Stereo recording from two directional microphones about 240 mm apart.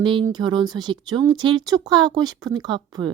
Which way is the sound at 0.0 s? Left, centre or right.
Centre.